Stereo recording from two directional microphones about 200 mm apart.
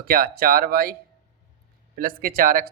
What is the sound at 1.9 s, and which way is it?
Speech, 45° right (ahead or behind).